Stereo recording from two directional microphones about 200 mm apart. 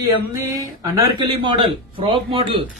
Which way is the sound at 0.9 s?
20° right (ahead or behind).